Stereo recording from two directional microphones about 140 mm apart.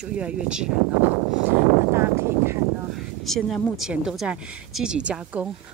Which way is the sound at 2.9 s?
Centre (ahead or behind).